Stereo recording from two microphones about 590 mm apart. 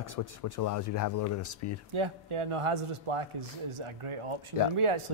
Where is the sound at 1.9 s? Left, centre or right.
Right.